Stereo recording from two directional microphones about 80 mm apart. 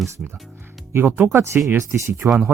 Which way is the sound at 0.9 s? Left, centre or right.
Right.